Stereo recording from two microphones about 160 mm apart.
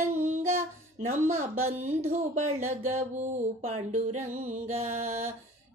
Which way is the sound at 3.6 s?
45° right (ahead or behind).